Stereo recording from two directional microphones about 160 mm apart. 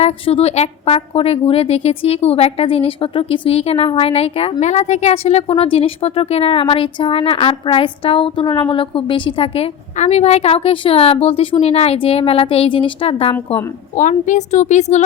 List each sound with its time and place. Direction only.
0.0 s a woman's voice: 40° left (ahead or behind)
13.9 s a woman's voice: 50° left (ahead or behind)